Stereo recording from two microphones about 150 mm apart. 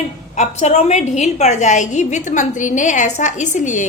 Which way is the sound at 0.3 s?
50° left (ahead or behind).